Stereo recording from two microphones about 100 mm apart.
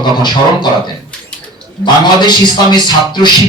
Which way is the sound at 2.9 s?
50° left (ahead or behind).